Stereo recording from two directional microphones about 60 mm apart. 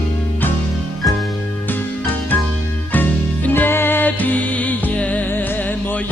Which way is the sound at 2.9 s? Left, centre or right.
Left.